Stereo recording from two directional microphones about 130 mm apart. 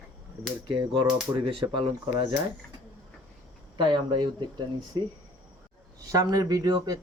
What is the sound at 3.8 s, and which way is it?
Speech, 35° right (ahead or behind).